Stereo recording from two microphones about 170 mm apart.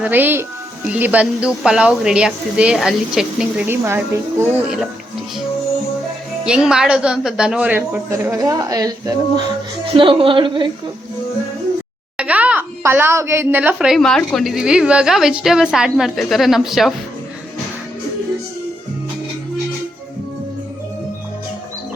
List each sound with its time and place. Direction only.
0.0 s speech: 10° right (ahead or behind)
3.7 s speech: 15° right (ahead or behind)
6.4 s speech: 5° right (ahead or behind)
8.3 s speech: 20° right (ahead or behind)
9.9 s a woman's voice: 30° right (ahead or behind)
12.1 s speech: 10° right (ahead or behind)